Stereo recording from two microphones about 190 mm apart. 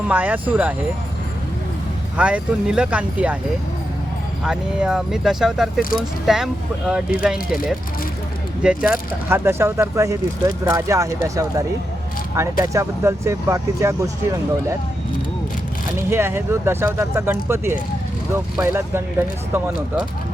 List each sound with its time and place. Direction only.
0.1 s speech: 10° right (ahead or behind)
2.1 s speech: 5° right (ahead or behind)
4.4 s speech: 5° right (ahead or behind)
12.6 s speech: 15° right (ahead or behind)
16.0 s speech: 15° right (ahead or behind)